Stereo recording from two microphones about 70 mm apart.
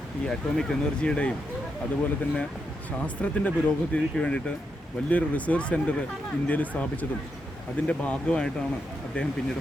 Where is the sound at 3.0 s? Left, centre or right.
Centre.